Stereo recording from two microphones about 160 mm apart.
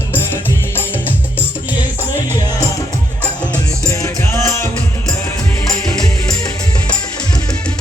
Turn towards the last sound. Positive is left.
turn(degrees=25)  # may be behind; listen again after turning